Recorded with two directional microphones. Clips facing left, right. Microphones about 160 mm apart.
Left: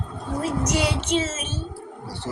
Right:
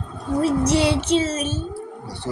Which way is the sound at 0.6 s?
30° right (ahead or behind).